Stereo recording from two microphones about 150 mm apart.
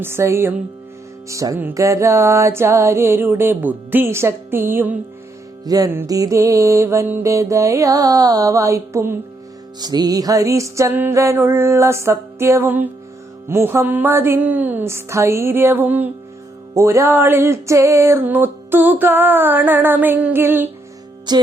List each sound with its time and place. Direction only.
0.0 s music: 15° right (ahead or behind)
5.6 s music: 25° right (ahead or behind)
21.3 s music: 30° right (ahead or behind)